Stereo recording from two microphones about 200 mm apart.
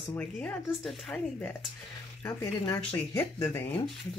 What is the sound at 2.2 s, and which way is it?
Speech, 15° left (ahead or behind).